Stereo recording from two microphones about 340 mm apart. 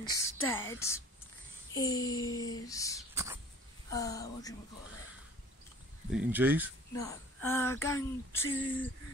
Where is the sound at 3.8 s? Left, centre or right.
Centre.